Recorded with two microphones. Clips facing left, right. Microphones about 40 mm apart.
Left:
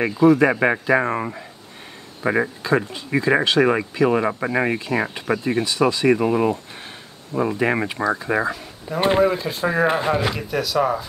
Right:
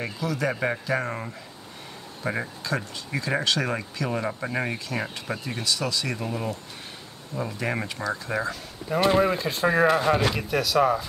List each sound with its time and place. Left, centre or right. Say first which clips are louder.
0.0 s speech: left 13 dB; left
9.2 s speech: left 4 dB; centre
9.8 s speech: left 1 dB; left
10.3 s speech: left 1 dB; centre